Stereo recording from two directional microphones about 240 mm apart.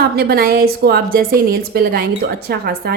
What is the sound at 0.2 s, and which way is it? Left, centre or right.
A woman's voice, right.